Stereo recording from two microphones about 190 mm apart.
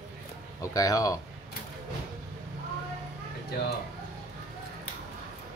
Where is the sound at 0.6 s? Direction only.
20° left (ahead or behind).